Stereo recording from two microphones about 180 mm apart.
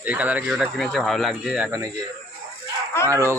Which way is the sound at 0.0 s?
10° right (ahead or behind).